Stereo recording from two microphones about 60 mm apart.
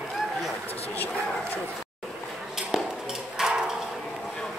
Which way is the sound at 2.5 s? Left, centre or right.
Centre.